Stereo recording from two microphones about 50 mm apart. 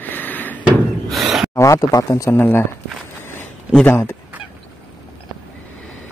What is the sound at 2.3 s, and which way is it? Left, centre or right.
Speech, left.